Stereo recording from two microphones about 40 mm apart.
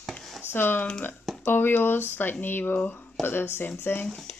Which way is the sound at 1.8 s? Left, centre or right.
Left.